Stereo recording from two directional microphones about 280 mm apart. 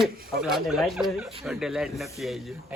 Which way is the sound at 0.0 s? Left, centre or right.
Centre.